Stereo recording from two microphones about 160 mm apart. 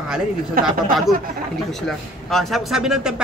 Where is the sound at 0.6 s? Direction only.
65° right (ahead or behind).